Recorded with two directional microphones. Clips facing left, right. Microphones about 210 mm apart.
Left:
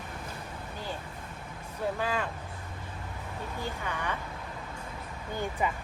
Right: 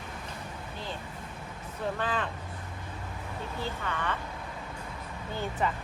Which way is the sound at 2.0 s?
10° left (ahead or behind).